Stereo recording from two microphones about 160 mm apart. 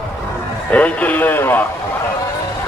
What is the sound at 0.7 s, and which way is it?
Speech, 10° left (ahead or behind).